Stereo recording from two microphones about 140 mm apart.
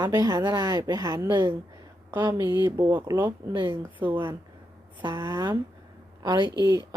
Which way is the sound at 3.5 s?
35° right (ahead or behind).